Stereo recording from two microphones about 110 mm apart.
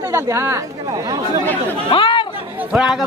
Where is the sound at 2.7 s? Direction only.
5° right (ahead or behind).